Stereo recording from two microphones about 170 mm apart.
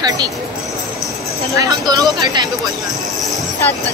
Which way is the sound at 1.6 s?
20° right (ahead or behind).